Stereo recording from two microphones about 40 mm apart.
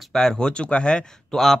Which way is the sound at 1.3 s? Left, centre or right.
Centre.